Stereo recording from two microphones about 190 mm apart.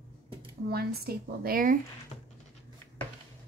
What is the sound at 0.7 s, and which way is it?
A woman's voice, 55° right (ahead or behind).